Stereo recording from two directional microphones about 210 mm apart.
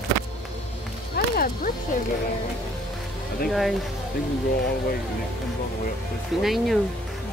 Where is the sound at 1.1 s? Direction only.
45° left (ahead or behind).